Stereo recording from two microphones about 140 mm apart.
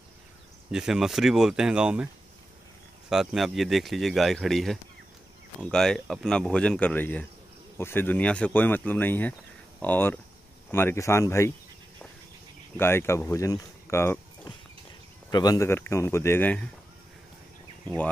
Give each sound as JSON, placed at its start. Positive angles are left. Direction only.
{"t": 0.7, "sound": "speech", "side_deg": -5}
{"t": 3.1, "sound": "speech", "side_deg": 0}
{"t": 12.7, "sound": "speech", "side_deg": 15}
{"t": 15.3, "sound": "speech", "side_deg": 25}
{"t": 17.8, "sound": "speech", "side_deg": 10}